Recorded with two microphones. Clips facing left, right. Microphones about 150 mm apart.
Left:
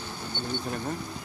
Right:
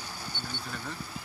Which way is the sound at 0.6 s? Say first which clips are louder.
Left 7 dB; 45° left (ahead or behind).